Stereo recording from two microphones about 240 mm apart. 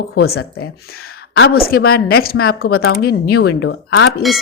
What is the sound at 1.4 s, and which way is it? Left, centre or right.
Speech, left.